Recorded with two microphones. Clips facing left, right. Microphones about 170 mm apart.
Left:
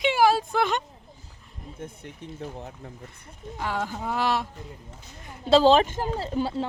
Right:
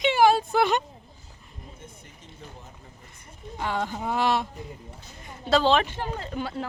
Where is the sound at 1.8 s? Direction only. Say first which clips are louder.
Left 9 dB; 60° left (ahead or behind).